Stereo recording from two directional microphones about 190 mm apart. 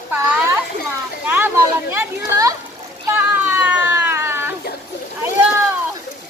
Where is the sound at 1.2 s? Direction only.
10° right (ahead or behind).